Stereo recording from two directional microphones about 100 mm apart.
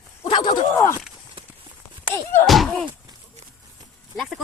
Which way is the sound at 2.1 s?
25° left (ahead or behind).